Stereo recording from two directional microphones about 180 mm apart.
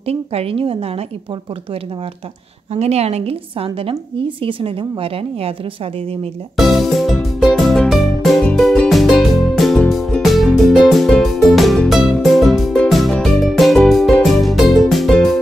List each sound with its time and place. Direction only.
0.0 s a woman's voice: 35° right (ahead or behind)
2.7 s a woman's voice: 35° right (ahead or behind)
6.5 s music: centre (ahead or behind)